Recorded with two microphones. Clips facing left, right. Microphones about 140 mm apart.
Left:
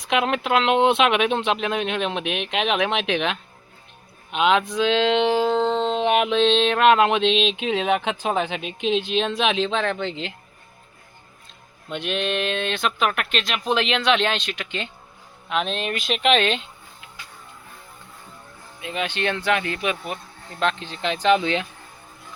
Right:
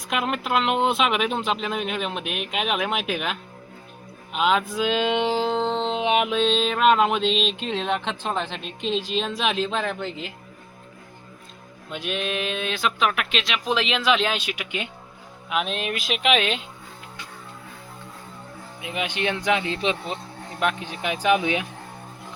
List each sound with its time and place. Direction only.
0.0 s music: centre (ahead or behind)
4.3 s speech: centre (ahead or behind)
5.5 s music: 10° right (ahead or behind)
11.9 s music: centre (ahead or behind)
18.8 s speech: 10° right (ahead or behind)
20.6 s speech: 10° right (ahead or behind)